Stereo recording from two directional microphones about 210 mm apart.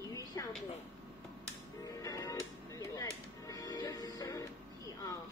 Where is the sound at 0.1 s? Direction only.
15° left (ahead or behind).